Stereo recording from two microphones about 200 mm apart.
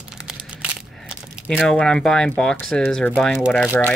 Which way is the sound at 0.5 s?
5° right (ahead or behind).